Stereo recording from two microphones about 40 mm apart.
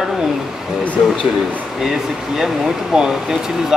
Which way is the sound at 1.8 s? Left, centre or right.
Centre.